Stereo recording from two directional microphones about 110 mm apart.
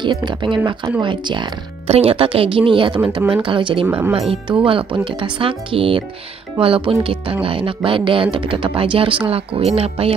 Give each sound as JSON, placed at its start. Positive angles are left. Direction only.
{"t": 0.0, "sound": "speech", "side_deg": -45}
{"t": 1.9, "sound": "a woman's voice", "side_deg": -60}
{"t": 3.8, "sound": "speech", "side_deg": -15}
{"t": 4.1, "sound": "a woman's voice", "side_deg": -55}